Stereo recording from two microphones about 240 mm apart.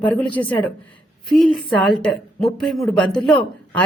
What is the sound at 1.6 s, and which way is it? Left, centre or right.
A woman's voice, centre.